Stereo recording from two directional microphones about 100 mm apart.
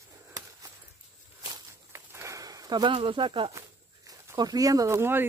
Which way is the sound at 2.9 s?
60° right (ahead or behind).